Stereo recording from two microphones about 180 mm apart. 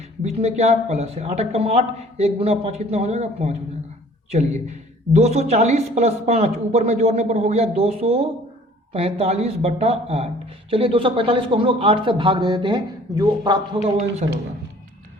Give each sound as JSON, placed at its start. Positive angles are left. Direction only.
{"t": 0.2, "sound": "a woman's voice", "side_deg": -35}
{"t": 13.8, "sound": "a woman's voice", "side_deg": -40}